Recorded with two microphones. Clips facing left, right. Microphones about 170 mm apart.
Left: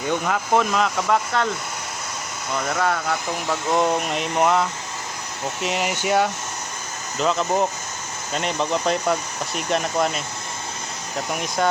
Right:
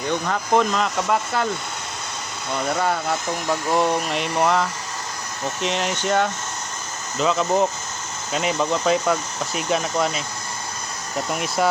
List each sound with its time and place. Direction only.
0.1 s speech: 5° left (ahead or behind)
2.6 s speech: centre (ahead or behind)
3.2 s speech: 15° right (ahead or behind)
3.7 s speech: centre (ahead or behind)
5.6 s speech: 5° left (ahead or behind)
11.3 s speech: 5° right (ahead or behind)